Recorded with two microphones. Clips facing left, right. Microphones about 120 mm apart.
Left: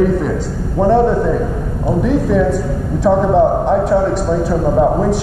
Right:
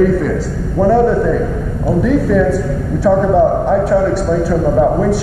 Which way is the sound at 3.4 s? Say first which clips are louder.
Right 1 dB; 25° left (ahead or behind).